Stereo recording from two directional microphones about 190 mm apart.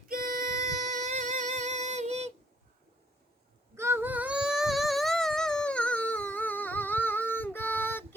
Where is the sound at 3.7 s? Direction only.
15° right (ahead or behind); by 8.0 s 10° left (ahead or behind).